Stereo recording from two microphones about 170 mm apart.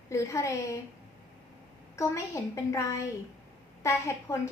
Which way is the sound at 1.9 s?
20° left (ahead or behind).